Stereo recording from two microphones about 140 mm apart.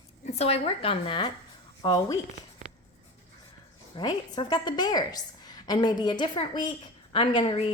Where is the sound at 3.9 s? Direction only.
30° left (ahead or behind).